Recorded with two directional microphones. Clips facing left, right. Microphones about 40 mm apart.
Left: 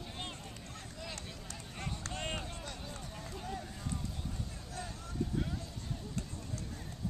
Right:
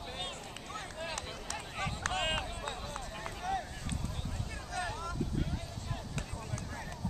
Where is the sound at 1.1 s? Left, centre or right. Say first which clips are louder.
Right 6 dB; right.